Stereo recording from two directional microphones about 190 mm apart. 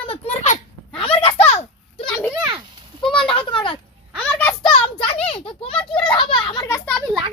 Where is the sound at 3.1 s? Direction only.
25° left (ahead or behind).